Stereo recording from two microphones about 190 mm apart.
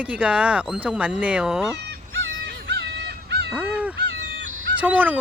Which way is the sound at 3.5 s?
5° right (ahead or behind).